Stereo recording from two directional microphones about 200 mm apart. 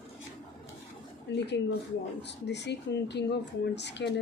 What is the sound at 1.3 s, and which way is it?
Speech, 60° left (ahead or behind).